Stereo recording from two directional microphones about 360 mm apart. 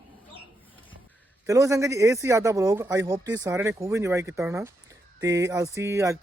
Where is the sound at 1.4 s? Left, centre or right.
Centre.